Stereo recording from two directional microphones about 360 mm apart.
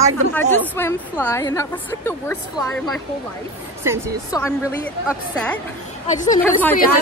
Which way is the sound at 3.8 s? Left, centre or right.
Centre.